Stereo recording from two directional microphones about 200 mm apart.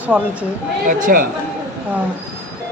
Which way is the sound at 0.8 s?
40° right (ahead or behind).